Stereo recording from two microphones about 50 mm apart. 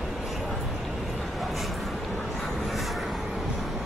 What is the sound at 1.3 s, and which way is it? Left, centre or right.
Vehicle, centre.